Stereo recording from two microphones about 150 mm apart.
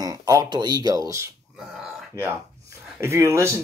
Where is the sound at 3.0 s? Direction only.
20° right (ahead or behind).